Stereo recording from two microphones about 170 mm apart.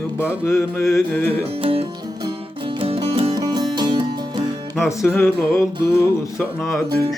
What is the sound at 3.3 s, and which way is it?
Music, 20° right (ahead or behind).